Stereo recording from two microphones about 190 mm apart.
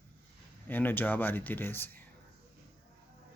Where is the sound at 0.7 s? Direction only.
10° left (ahead or behind).